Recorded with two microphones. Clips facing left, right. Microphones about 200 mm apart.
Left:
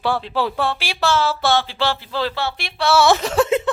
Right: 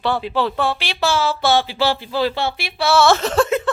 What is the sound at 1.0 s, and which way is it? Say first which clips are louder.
A woman's voice: even; 5° right (ahead or behind).